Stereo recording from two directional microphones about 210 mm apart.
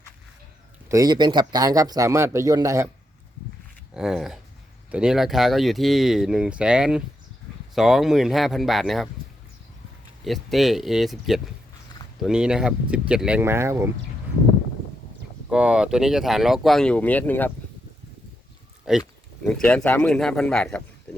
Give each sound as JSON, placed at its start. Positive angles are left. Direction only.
{"t": 0.9, "sound": "a man's voice", "side_deg": -15}
{"t": 3.9, "sound": "speech", "side_deg": 0}
{"t": 10.2, "sound": "speech", "side_deg": 0}
{"t": 15.4, "sound": "speech", "side_deg": -5}
{"t": 18.9, "sound": "speech", "side_deg": -5}